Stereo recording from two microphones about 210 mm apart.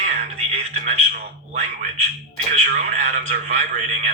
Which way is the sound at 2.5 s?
35° right (ahead or behind).